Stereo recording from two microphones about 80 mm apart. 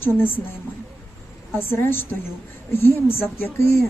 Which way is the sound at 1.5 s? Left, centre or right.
Left.